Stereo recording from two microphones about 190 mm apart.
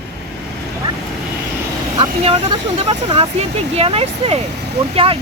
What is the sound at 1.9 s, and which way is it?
Speech, 25° right (ahead or behind).